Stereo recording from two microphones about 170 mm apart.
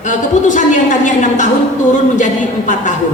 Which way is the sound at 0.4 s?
50° left (ahead or behind).